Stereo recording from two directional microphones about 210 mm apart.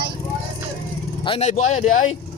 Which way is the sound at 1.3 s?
30° left (ahead or behind).